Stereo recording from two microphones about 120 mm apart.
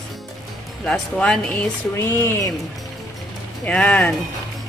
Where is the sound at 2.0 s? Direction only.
20° left (ahead or behind).